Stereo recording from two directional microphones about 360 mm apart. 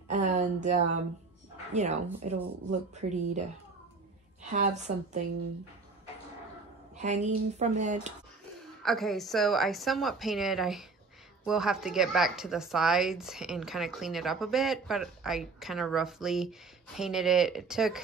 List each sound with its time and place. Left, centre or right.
0.1 s a sound: centre
1.7 s speech: centre
4.5 s speech: centre
7.0 s speech: centre
8.8 s speech: centre